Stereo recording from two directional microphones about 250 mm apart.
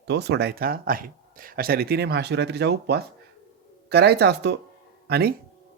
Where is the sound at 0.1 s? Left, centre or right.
Right.